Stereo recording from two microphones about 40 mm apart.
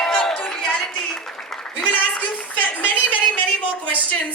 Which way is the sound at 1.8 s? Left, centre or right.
Left.